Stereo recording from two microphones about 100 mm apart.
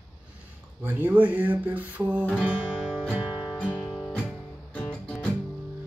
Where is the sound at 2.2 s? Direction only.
5° left (ahead or behind).